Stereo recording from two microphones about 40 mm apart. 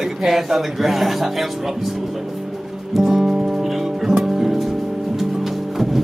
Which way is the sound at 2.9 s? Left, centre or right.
Centre.